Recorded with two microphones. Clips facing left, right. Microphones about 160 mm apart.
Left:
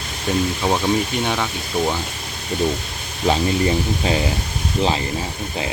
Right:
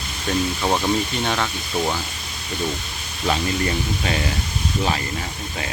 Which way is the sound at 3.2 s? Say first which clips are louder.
Left 4 dB; 25° left (ahead or behind).